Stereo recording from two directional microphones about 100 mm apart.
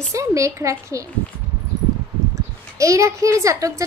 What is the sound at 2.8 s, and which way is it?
A woman's voice, 30° right (ahead or behind).